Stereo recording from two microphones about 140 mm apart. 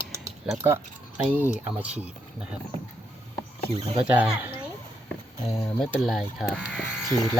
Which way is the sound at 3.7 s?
45° right (ahead or behind).